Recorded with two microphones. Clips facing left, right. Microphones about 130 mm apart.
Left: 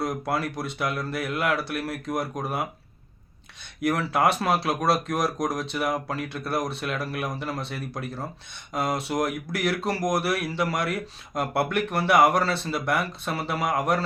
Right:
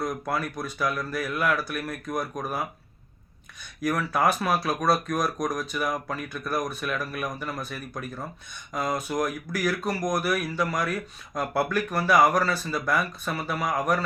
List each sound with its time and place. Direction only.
0.0 s speech: 30° left (ahead or behind)
3.8 s speech: 25° left (ahead or behind)